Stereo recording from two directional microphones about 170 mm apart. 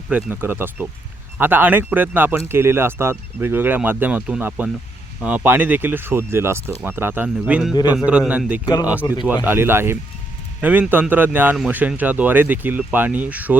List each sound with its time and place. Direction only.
0.1 s speech: 10° right (ahead or behind)
8.6 s speech: 20° left (ahead or behind)
8.9 s speech: 10° right (ahead or behind)